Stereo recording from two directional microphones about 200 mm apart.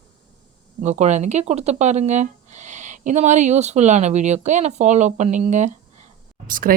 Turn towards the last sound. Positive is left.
turn(degrees=-45)  # may be behind; listen again after turning